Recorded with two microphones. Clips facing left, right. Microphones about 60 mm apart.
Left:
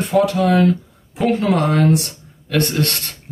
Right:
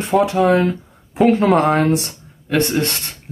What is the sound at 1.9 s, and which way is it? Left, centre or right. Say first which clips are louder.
Speech: left 1 dB; right.